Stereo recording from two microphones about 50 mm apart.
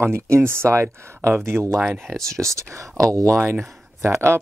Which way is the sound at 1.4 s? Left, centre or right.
Right.